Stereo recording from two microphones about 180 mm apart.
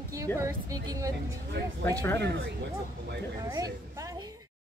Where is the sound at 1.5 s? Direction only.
70° right (ahead or behind).